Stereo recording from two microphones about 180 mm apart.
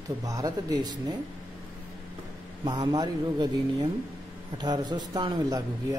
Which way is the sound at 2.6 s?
20° right (ahead or behind).